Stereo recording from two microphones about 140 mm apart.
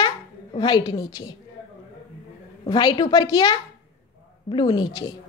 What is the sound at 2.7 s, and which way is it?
A woman's voice, 30° left (ahead or behind).